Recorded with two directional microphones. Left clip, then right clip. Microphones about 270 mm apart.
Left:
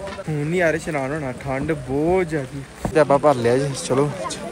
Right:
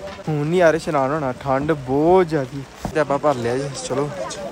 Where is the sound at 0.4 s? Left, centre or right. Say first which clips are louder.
Right 4 dB; centre.